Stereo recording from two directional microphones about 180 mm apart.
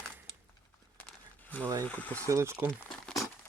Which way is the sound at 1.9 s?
10° left (ahead or behind).